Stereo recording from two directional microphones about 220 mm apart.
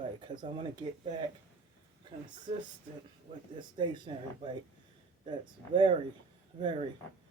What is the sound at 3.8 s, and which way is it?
Speech, 20° right (ahead or behind).